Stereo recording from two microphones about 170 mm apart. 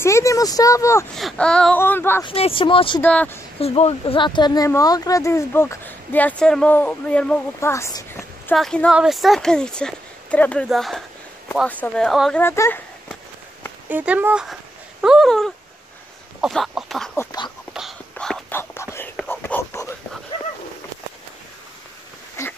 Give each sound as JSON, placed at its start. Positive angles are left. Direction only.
{"t": 0.0, "sound": "speech", "side_deg": 15}
{"t": 1.1, "sound": "speech", "side_deg": 5}
{"t": 2.2, "sound": "speech", "side_deg": 35}
{"t": 3.0, "sound": "speech", "side_deg": 10}
{"t": 3.5, "sound": "speech", "side_deg": 35}
{"t": 8.5, "sound": "speech", "side_deg": 5}
{"t": 12.4, "sound": "speech", "side_deg": 15}
{"t": 13.8, "sound": "speech", "side_deg": -10}
{"t": 17.2, "sound": "speech", "side_deg": 20}
{"t": 18.1, "sound": "whispering", "side_deg": 5}
{"t": 22.4, "sound": "a sound", "side_deg": 15}